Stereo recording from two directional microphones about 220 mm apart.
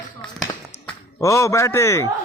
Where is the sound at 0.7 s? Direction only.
15° left (ahead or behind).